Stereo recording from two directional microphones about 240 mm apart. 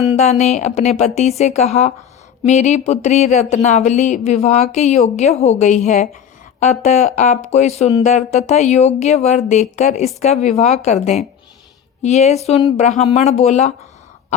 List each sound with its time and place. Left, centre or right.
0.2 s speech: left